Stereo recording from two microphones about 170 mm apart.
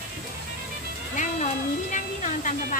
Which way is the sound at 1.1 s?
45° left (ahead or behind).